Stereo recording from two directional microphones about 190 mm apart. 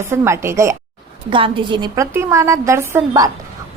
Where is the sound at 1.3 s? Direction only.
25° right (ahead or behind).